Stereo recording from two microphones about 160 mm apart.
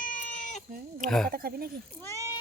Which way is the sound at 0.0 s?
55° left (ahead or behind).